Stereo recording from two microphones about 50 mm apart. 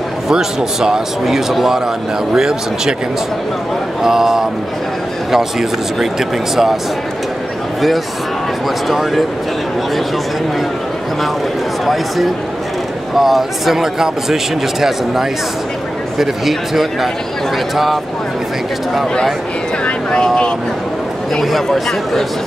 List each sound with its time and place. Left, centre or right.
0.3 s speech: centre
4.0 s speech: centre
8.8 s speech: centre
11.8 s speech: centre
19.8 s vehicle: left
21.4 s speech: centre